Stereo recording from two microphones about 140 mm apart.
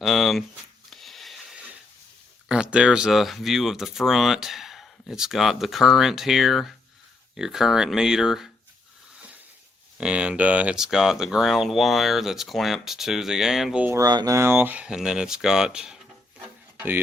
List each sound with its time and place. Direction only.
0.0 s speech: centre (ahead or behind)
0.9 s a sound: centre (ahead or behind)
2.5 s speech: 5° right (ahead or behind)
10.0 s speech: 10° right (ahead or behind)
13.8 s speech: 20° right (ahead or behind)
14.1 s speech: 30° right (ahead or behind)
14.3 s speech: 15° right (ahead or behind)
16.4 s a sound: 15° right (ahead or behind)